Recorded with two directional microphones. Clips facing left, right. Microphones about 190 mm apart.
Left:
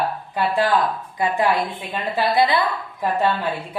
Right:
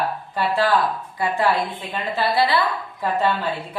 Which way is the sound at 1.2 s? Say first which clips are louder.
Left 1 dB; 20° left (ahead or behind).